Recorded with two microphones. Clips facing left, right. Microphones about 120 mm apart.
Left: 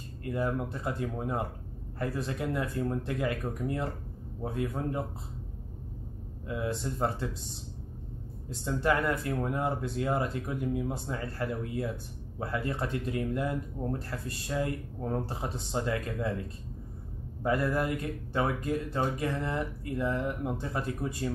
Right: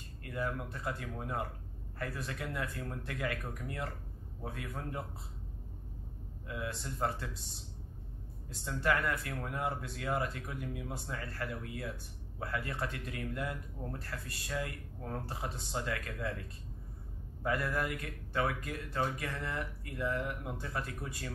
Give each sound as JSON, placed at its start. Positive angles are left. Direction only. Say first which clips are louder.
{"t": 0.2, "sound": "speech", "louder": "left 7 dB", "side_deg": 25}
{"t": 6.4, "sound": "speech", "louder": "left 7 dB", "side_deg": 25}
{"t": 8.6, "sound": "speech", "louder": "left 5 dB", "side_deg": 25}
{"t": 17.4, "sound": "speech", "louder": "left 6 dB", "side_deg": 25}